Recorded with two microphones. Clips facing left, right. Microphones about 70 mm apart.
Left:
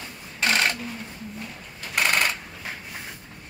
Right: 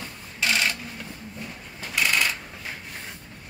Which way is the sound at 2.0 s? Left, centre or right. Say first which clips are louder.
Left 1 dB; left.